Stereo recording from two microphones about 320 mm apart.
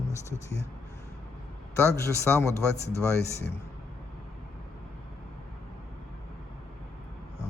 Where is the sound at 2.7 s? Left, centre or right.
Left.